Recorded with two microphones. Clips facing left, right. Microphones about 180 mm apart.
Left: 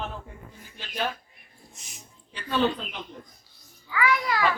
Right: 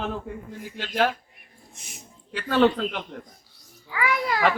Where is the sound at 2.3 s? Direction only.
90° right.